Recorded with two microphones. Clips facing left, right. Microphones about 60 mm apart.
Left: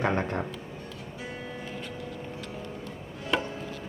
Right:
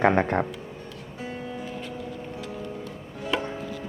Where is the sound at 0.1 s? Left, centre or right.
Right.